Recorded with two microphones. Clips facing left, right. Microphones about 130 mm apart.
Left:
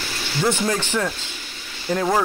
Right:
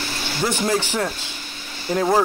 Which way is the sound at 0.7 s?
15° right (ahead or behind).